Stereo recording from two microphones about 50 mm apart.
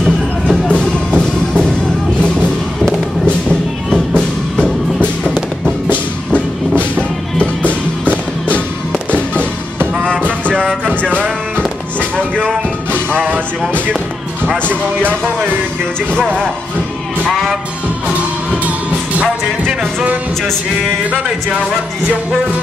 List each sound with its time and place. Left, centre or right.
0.5 s music: centre
3.4 s music: centre
6.3 s music: left
9.1 s fireworks: left
12.0 s music: left
14.7 s speech: left
17.3 s music: centre